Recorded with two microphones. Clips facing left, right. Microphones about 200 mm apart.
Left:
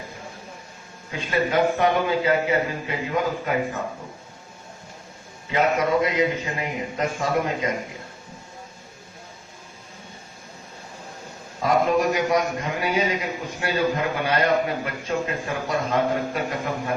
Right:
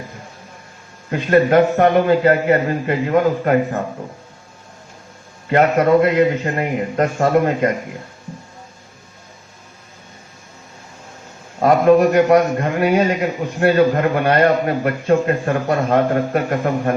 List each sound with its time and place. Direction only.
1.1 s a man's voice: 55° right (ahead or behind)
5.5 s a man's voice: 55° right (ahead or behind)
11.6 s a man's voice: 60° right (ahead or behind)